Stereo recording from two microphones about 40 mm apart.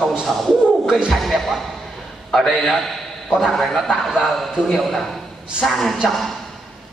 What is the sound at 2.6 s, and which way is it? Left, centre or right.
A man's voice, centre.